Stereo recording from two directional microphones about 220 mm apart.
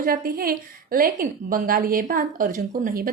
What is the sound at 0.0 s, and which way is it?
A woman's voice, 40° right (ahead or behind).